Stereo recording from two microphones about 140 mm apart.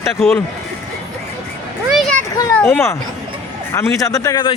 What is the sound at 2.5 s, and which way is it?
Speech, 15° left (ahead or behind).